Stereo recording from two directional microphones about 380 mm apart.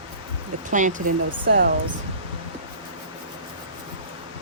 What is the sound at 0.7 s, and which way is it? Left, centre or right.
Speech, centre.